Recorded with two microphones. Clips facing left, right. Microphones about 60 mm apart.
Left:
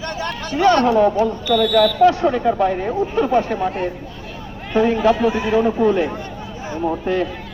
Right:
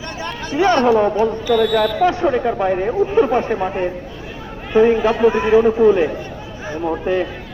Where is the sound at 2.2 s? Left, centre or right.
Centre.